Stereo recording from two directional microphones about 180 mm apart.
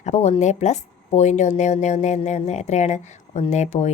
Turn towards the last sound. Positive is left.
turn(degrees=40)  # may be behind; listen again after turning